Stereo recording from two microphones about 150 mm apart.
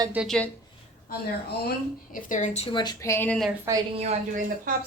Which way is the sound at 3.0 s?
15° left (ahead or behind).